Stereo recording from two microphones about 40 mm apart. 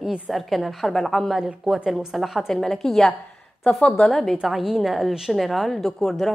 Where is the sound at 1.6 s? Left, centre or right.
Centre.